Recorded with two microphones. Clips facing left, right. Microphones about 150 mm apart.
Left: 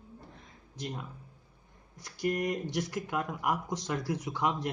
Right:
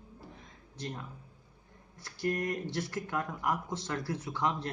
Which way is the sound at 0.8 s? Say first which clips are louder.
Left 1 dB; 10° left (ahead or behind).